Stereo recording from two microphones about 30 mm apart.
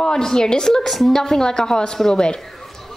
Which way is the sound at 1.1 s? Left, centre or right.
Centre.